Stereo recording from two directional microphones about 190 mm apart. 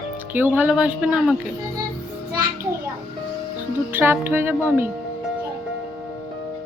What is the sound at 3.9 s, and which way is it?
Speech, 10° right (ahead or behind).